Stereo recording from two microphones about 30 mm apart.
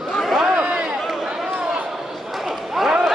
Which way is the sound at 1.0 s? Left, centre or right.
Centre.